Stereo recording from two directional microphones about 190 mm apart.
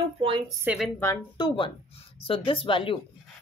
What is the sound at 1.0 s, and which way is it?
Speech, 20° left (ahead or behind).